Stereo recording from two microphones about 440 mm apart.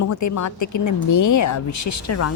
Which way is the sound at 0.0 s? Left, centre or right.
Left.